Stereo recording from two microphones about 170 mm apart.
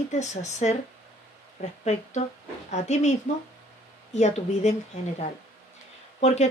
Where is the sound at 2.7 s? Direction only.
45° left (ahead or behind).